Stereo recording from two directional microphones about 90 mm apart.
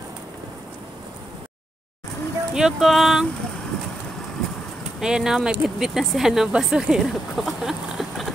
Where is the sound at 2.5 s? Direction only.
5° right (ahead or behind).